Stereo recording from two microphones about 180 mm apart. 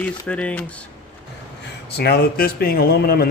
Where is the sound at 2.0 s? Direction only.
60° left (ahead or behind).